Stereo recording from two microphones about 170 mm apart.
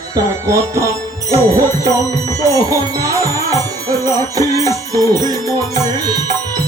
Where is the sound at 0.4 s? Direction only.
15° right (ahead or behind).